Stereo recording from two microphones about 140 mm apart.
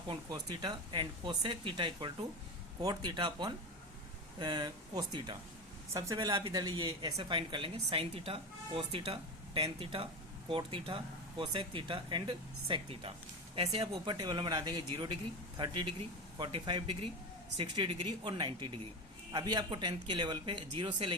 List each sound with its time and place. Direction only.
0.1 s speech: 30° right (ahead or behind)
6.1 s speech: 35° right (ahead or behind)